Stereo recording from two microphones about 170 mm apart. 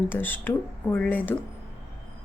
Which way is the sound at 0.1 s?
10° left (ahead or behind).